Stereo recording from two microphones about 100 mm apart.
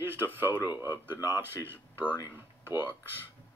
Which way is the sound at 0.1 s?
20° right (ahead or behind).